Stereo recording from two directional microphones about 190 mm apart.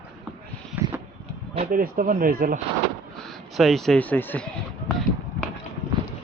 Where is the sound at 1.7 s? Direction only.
45° right (ahead or behind).